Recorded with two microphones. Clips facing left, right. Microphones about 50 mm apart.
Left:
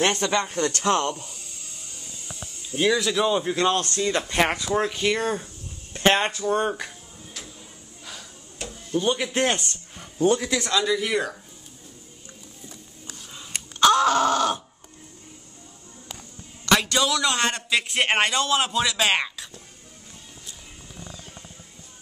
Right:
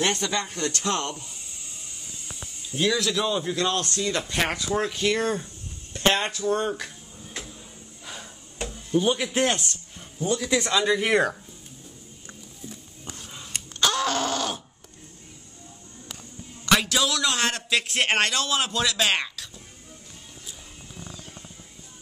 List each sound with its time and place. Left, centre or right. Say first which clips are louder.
0.0 s speech: left 3 dB; left
2.7 s speech: left 2 dB; centre
3.5 s speech: left 3 dB; left
5.9 s speech: left 3 dB; left
7.3 s a sound: right 4 dB; right
8.9 s a man's voice: right 1 dB; centre
10.1 s a man's voice: left 6 dB; left
10.5 s speech: right 1 dB; centre
10.9 s speech: right 2 dB; right
13.5 s a sound: left 7 dB; centre
16.6 s a man's voice: left 1 dB; centre